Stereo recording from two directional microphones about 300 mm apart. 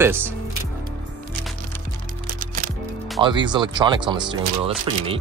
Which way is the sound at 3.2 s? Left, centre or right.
Centre.